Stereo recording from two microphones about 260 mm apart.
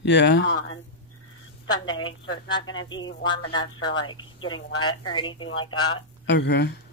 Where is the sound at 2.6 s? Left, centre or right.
Left.